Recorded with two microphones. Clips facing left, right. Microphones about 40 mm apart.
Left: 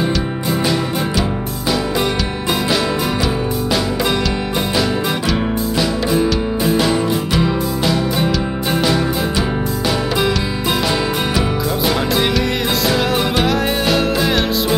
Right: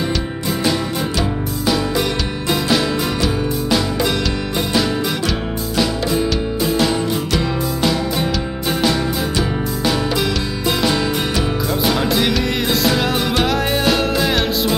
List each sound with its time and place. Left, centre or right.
10.8 s music: centre